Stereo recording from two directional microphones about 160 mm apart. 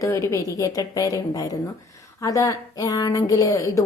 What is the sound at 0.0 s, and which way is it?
A woman's voice, 20° left (ahead or behind).